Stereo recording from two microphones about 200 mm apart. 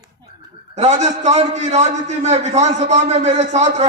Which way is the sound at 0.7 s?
35° right (ahead or behind).